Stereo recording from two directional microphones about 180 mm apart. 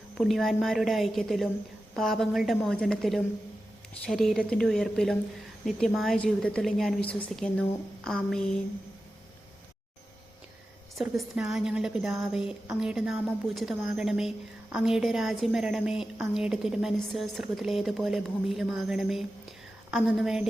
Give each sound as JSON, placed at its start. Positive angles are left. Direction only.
{"t": 0.2, "sound": "a woman's voice", "side_deg": 0}
{"t": 11.0, "sound": "a woman's voice", "side_deg": -5}